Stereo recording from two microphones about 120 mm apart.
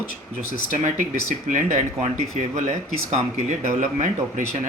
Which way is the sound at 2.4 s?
75° right (ahead or behind).